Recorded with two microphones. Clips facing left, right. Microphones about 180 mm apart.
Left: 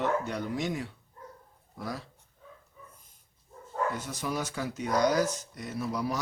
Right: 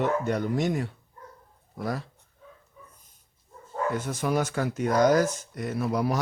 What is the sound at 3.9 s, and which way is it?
Speech, 55° right (ahead or behind).